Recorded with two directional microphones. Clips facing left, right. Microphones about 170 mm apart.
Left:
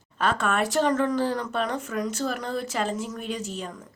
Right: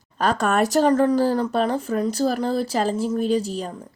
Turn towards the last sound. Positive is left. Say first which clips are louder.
# right 9 dB
turn(degrees=-35)  # may be behind; listen again after turning